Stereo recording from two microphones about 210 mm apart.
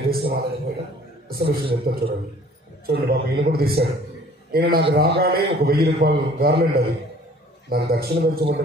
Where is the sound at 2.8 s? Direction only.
45° right (ahead or behind).